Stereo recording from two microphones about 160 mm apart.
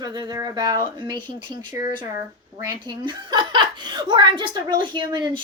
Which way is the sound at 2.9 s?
25° right (ahead or behind).